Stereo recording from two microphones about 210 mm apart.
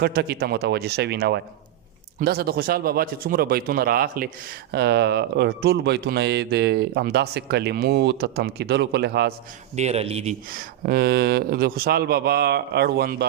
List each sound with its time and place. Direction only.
0.0 s speech: 50° right (ahead or behind)
9.7 s a man's voice: 30° right (ahead or behind)
10.5 s speech: 45° right (ahead or behind)